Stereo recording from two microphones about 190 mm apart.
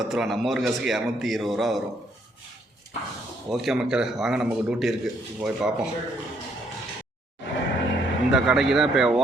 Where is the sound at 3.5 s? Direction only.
Centre (ahead or behind).